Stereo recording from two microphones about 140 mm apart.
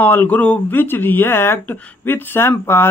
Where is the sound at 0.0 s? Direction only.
10° left (ahead or behind).